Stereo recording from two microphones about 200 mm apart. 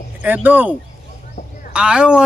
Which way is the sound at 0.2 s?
10° right (ahead or behind).